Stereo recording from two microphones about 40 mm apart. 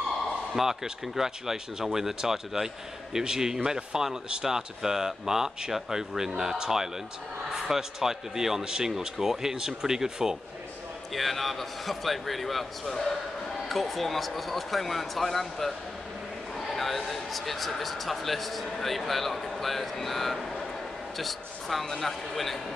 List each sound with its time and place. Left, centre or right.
0.6 s speech: centre
11.1 s speech: centre
12.8 s a man's voice: centre
13.7 s speech: centre